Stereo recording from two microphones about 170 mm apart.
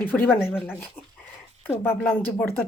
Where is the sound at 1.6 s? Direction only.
15° left (ahead or behind).